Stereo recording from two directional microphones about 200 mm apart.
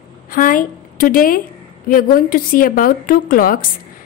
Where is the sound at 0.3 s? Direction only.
45° left (ahead or behind).